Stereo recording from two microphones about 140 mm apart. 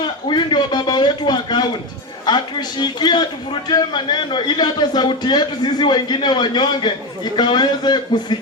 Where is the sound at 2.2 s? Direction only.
30° left (ahead or behind).